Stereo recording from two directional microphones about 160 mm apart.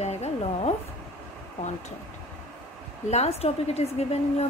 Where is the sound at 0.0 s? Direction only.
45° left (ahead or behind).